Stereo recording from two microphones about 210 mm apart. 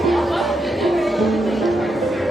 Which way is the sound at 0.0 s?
Centre (ahead or behind).